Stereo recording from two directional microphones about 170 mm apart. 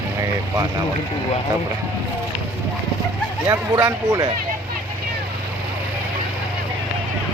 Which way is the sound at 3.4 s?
20° right (ahead or behind).